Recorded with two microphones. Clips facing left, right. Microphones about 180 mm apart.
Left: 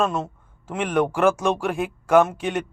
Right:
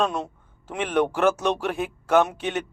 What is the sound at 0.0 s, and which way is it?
A man's voice, centre (ahead or behind).